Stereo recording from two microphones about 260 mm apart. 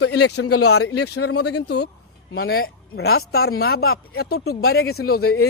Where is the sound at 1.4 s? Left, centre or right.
Left.